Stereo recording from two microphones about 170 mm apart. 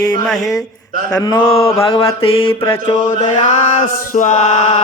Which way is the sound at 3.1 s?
40° left (ahead or behind).